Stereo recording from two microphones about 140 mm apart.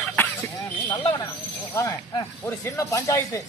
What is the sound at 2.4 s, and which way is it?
Speech, 20° left (ahead or behind).